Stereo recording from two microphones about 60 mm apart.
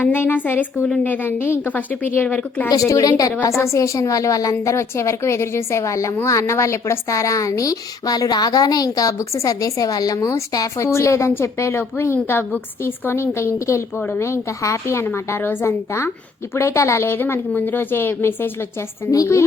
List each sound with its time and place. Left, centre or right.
0.0 s a woman's voice: left
2.6 s a woman's voice: left
3.6 s a woman's voice: left
4.6 s a woman's voice: left
9.3 s a woman's voice: left
10.2 s a woman's voice: left
13.9 s a woman's voice: left
14.2 s a woman's voice: left
15.0 s a woman's voice: left
16.6 s a woman's voice: left
19.1 s a woman's voice: left